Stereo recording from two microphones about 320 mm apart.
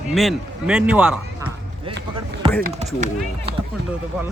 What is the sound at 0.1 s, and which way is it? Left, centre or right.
Speech, centre.